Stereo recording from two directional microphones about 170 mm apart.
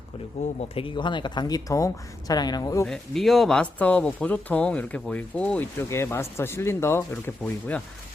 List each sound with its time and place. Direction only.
0.4 s speech: 40° left (ahead or behind)
0.8 s speech: 30° left (ahead or behind)
2.8 s speech: centre (ahead or behind)